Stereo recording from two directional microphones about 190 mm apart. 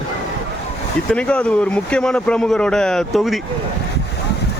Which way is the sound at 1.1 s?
5° left (ahead or behind).